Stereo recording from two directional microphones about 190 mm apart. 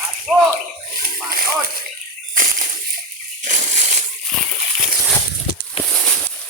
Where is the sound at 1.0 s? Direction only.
50° right (ahead or behind).